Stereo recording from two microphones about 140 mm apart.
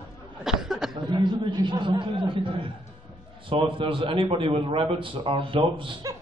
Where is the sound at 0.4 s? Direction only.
5° right (ahead or behind).